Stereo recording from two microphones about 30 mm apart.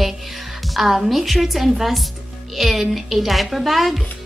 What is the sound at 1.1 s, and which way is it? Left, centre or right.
Speech, centre.